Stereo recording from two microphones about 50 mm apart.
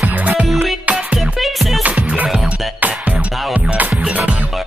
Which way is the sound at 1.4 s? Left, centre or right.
Centre.